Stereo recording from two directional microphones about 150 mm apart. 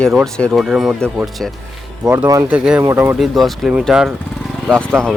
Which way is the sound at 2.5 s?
5° right (ahead or behind).